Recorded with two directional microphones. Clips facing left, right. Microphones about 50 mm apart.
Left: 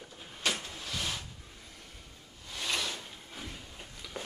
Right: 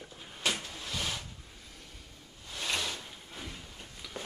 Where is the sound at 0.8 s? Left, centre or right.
Centre.